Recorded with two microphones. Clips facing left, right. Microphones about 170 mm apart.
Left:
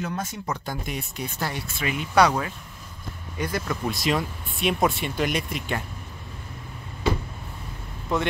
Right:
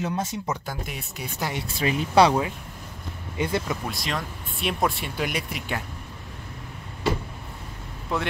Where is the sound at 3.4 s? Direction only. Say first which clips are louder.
Right 3 dB; 25° right (ahead or behind).